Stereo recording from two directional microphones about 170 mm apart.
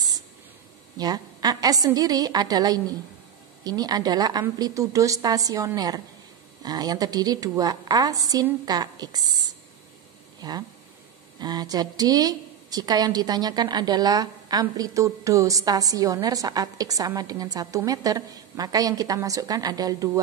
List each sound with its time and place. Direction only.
0.9 s speech: 25° right (ahead or behind)
10.4 s speech: 25° right (ahead or behind)